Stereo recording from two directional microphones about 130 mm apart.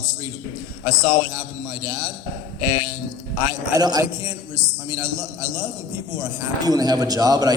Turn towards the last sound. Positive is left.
turn(degrees=-30)  # may be behind; listen again after turning